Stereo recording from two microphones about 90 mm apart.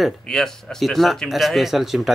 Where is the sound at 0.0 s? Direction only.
5° left (ahead or behind).